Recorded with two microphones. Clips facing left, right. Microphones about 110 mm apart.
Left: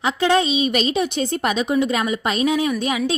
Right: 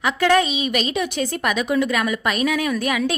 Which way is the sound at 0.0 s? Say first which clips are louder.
Even; 25° left (ahead or behind).